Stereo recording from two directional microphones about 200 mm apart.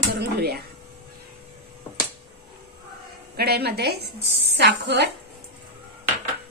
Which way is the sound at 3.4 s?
50° right (ahead or behind).